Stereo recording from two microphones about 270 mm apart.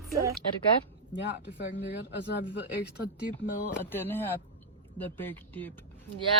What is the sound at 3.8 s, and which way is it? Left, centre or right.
Speech, centre.